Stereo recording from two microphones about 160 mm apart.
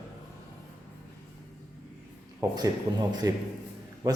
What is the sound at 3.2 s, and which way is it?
Speech, 20° right (ahead or behind).